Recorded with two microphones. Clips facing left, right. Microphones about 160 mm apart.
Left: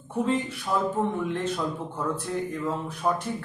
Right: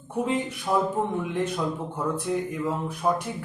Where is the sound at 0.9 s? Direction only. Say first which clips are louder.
Right 1 dB; 15° right (ahead or behind).